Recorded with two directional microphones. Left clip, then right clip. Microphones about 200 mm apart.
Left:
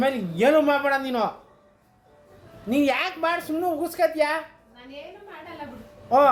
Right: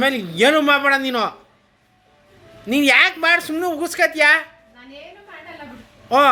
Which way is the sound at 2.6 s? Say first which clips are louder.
Right 9 dB; 15° right (ahead or behind).